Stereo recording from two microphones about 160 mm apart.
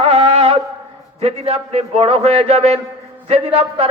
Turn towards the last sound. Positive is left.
turn(degrees=-40)  # may be behind; listen again after turning